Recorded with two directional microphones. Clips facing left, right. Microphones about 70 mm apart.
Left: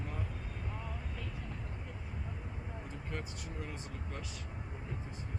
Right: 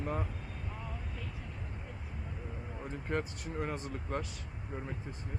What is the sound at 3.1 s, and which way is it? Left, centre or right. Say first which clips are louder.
Speech: right 9 dB; right.